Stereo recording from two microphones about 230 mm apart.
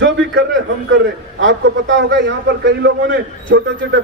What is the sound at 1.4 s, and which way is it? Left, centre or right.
Speech, right.